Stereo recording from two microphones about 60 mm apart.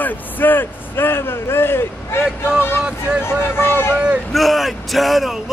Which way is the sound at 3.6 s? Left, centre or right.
Left.